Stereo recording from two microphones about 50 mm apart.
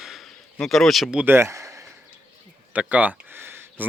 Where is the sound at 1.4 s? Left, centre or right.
Right.